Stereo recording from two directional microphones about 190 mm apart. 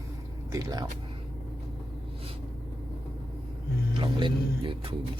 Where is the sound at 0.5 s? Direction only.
20° right (ahead or behind).